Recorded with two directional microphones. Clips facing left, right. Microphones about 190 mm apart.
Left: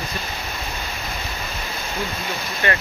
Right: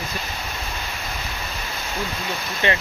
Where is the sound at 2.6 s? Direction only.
20° right (ahead or behind).